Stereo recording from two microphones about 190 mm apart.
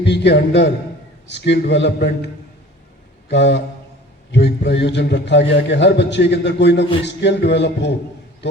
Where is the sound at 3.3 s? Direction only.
65° left (ahead or behind).